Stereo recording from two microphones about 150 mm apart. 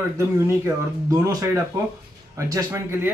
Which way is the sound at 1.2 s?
20° right (ahead or behind).